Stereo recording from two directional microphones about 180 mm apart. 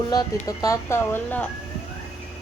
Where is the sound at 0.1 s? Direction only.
20° left (ahead or behind).